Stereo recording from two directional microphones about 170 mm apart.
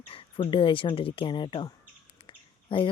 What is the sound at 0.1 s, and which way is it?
Speech, 35° left (ahead or behind).